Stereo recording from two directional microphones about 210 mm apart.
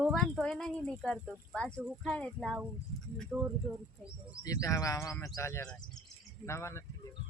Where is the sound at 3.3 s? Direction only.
10° right (ahead or behind).